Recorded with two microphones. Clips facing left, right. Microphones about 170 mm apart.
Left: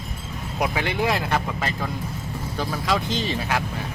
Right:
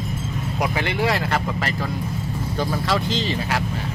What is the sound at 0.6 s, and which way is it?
Speech, 15° left (ahead or behind).